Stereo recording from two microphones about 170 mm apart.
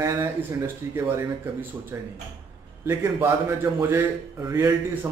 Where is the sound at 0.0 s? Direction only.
15° right (ahead or behind).